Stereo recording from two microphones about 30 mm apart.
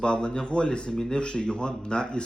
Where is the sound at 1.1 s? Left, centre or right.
Left.